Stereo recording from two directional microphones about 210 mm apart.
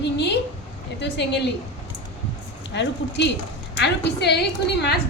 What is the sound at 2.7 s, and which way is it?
A woman's voice, 55° left (ahead or behind).